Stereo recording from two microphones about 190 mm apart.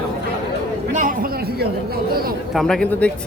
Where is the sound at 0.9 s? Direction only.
50° right (ahead or behind).